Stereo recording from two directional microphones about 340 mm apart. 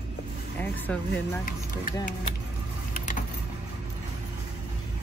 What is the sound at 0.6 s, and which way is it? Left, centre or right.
Speech, centre.